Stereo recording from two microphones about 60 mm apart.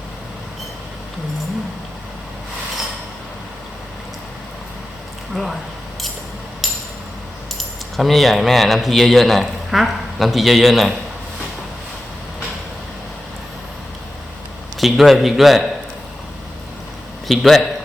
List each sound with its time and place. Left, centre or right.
5.3 s speech: centre
7.9 s a man's voice: centre
14.8 s a man's voice: centre
17.2 s speech: centre